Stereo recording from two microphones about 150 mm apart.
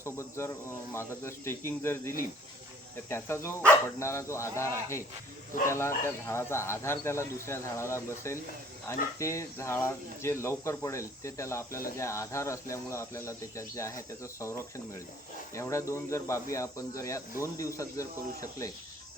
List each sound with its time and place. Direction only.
0.0 s speech: 20° left (ahead or behind)